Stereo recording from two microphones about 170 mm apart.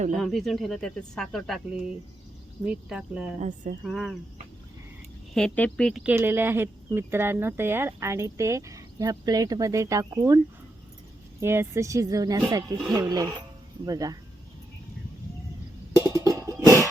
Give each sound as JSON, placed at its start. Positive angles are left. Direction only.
{"t": 0.2, "sound": "speech", "side_deg": 0}
{"t": 3.4, "sound": "speech", "side_deg": -45}
{"t": 3.8, "sound": "speech", "side_deg": 0}
{"t": 5.3, "sound": "speech", "side_deg": 5}
{"t": 16.2, "sound": "music", "side_deg": -20}